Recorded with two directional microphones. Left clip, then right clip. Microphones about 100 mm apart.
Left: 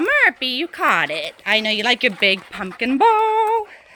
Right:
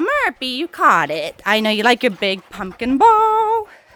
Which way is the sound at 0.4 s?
45° right (ahead or behind).